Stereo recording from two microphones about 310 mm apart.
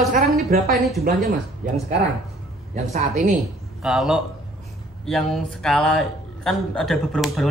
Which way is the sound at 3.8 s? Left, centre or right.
Centre.